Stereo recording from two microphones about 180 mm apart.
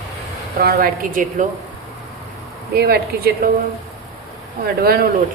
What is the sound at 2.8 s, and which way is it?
Speech, 60° right (ahead or behind).